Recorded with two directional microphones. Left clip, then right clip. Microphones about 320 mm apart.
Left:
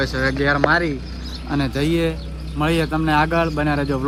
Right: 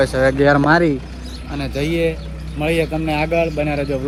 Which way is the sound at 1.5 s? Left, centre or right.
Centre.